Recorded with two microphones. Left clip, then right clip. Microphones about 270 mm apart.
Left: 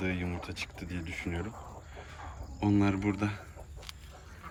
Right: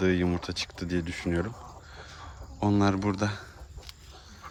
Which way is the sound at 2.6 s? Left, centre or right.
Centre.